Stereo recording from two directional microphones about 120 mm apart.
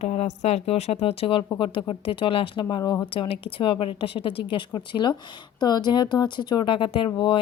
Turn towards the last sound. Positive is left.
turn(degrees=45)  # may be behind; listen again after turning